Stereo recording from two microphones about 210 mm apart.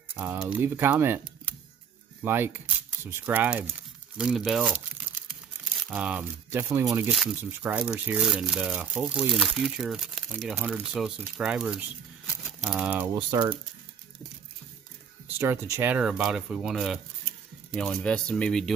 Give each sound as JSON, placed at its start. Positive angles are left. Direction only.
{"t": 0.1, "sound": "speech", "side_deg": -10}
{"t": 2.2, "sound": "speech", "side_deg": -10}
{"t": 13.1, "sound": "speech", "side_deg": -20}
{"t": 15.3, "sound": "speech", "side_deg": -10}